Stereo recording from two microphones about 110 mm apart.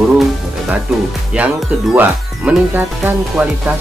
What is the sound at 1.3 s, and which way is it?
Speech, 10° right (ahead or behind).